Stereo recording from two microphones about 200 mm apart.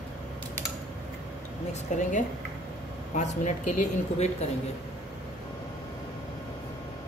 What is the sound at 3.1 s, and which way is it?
Speech, 35° left (ahead or behind).